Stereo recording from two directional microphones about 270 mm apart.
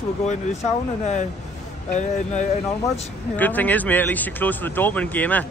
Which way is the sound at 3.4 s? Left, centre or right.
Centre.